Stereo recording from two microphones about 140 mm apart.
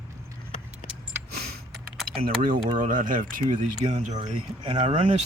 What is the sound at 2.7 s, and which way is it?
Speech, 70° right (ahead or behind).